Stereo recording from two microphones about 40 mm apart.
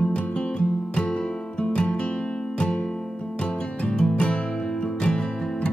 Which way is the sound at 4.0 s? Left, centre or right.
Left.